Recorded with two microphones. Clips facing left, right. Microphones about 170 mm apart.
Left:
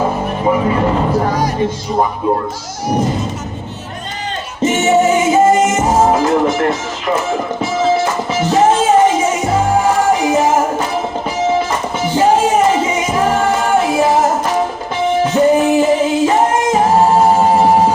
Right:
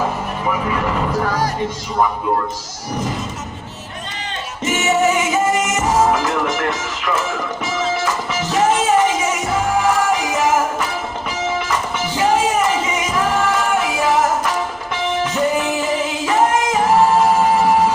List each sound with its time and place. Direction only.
0.0 s music: 30° left (ahead or behind)
4.6 s music: 30° left (ahead or behind)
16.7 s singing: 30° left (ahead or behind)